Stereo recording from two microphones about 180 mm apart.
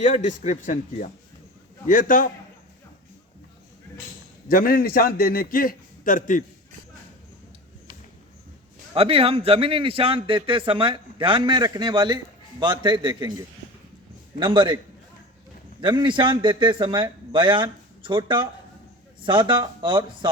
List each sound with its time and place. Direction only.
0.0 s a man's voice: 45° left (ahead or behind)
4.4 s a man's voice: 55° left (ahead or behind)
9.0 s a man's voice: 30° right (ahead or behind)
14.3 s a man's voice: 25° right (ahead or behind)
15.8 s a man's voice: 25° right (ahead or behind)